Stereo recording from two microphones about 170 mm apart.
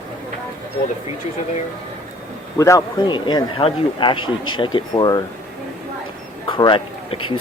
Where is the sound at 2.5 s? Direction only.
15° left (ahead or behind).